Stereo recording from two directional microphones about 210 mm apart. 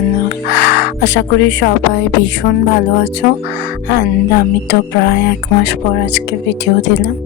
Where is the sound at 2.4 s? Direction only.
45° left (ahead or behind).